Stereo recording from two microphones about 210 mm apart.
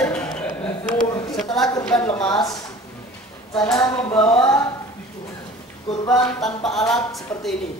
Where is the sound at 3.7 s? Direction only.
20° left (ahead or behind).